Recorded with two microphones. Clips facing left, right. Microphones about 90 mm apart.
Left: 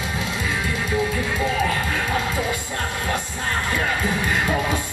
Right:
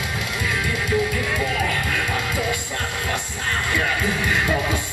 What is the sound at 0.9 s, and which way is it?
Music, 25° left (ahead or behind).